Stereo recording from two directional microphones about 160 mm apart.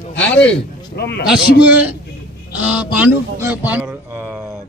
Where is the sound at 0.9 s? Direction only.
85° left.